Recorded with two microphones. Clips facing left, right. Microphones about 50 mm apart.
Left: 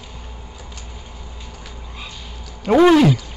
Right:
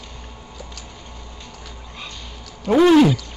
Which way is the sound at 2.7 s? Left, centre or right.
Centre.